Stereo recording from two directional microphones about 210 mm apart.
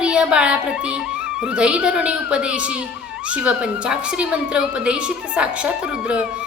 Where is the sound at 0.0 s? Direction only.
5° right (ahead or behind).